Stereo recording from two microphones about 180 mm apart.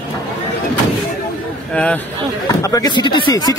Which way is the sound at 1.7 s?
10° left (ahead or behind).